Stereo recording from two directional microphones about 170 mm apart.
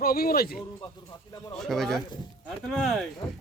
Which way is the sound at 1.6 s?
Centre (ahead or behind).